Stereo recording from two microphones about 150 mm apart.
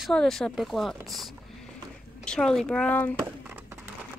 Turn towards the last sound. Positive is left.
turn(degrees=-15)  # may be behind; listen again after turning